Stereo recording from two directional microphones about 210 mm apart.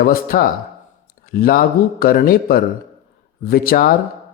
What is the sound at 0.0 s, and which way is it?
Speech, 45° left (ahead or behind).